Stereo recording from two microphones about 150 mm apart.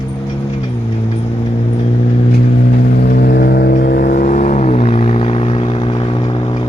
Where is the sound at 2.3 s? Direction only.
80° left.